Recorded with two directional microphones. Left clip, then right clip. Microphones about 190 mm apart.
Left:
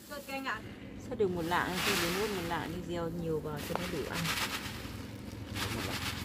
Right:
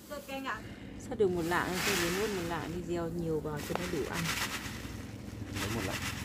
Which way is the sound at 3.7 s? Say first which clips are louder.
Left 1 dB; 25° right (ahead or behind).